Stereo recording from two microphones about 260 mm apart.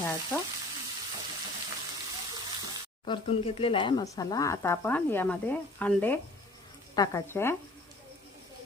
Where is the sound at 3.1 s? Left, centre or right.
Left.